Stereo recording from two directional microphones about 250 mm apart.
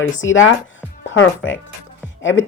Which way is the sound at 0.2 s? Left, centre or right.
Left.